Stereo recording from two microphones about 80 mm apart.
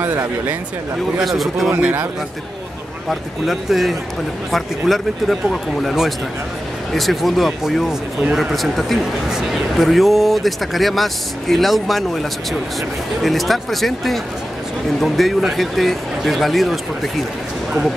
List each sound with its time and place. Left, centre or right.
0.0 s speech: right
1.1 s a man's voice: centre
1.7 s speech: right
3.1 s a man's voice: centre